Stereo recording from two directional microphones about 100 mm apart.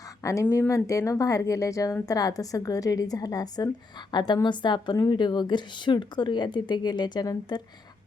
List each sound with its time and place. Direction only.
0.2 s speech: 30° left (ahead or behind)
0.4 s speech: 20° left (ahead or behind)
0.7 s a woman's voice: 30° left (ahead or behind)